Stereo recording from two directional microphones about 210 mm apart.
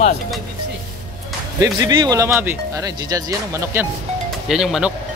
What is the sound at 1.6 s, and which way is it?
Speech, 15° right (ahead or behind).